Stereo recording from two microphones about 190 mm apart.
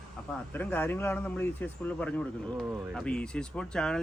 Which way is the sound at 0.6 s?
10° left (ahead or behind).